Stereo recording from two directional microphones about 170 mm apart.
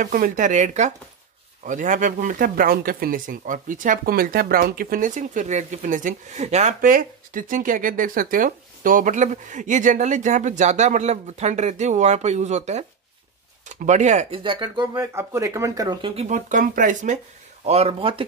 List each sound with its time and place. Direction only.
0.0 s speech: 50° right (ahead or behind)
14.4 s speech: 30° right (ahead or behind)
15.1 s speech: 15° right (ahead or behind)
16.2 s speech: 45° right (ahead or behind)
17.6 s speech: 35° right (ahead or behind)